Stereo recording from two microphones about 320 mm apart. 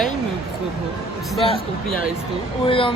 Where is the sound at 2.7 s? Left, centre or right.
Centre.